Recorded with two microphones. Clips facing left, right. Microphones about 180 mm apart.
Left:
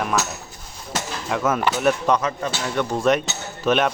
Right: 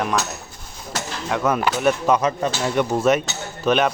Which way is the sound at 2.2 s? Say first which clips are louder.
Right 4 dB; 15° right (ahead or behind).